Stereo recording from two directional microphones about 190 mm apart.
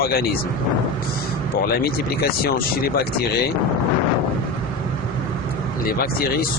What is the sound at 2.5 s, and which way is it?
Speech, 55° left (ahead or behind).